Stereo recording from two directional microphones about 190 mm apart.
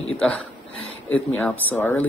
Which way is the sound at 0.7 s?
90° left.